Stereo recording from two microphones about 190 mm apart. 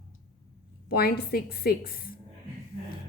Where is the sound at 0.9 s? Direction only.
55° left (ahead or behind).